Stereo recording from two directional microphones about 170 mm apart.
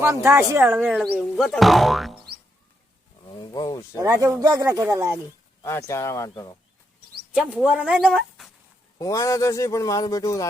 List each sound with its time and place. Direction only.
0.1 s speech: 15° right (ahead or behind); by 2.1 s centre (ahead or behind)
3.2 s a sound: 25° left (ahead or behind)
4.0 s speech: 20° right (ahead or behind)
5.6 s speech: 15° left (ahead or behind)
7.3 s speech: 5° right (ahead or behind)
9.0 s speech: 20° left (ahead or behind)